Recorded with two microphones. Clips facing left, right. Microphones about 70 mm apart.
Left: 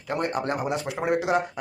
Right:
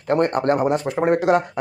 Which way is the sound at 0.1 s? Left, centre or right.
Right.